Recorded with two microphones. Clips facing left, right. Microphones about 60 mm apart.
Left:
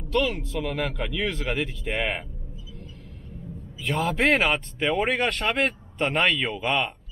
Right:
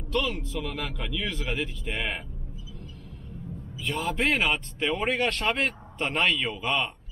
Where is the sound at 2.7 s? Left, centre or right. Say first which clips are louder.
Left 1 dB; left.